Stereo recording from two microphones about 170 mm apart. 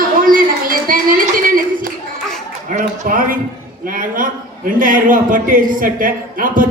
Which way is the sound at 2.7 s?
50° right (ahead or behind).